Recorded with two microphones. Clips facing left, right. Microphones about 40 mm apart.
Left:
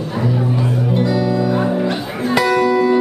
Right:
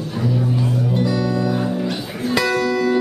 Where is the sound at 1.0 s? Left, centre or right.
Centre.